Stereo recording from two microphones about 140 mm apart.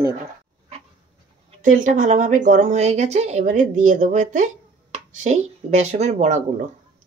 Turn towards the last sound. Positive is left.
turn(degrees=-55)  # may be behind; listen again after turning